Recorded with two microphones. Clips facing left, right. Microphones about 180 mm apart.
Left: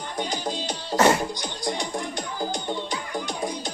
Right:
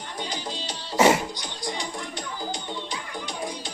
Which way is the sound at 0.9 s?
5° right (ahead or behind).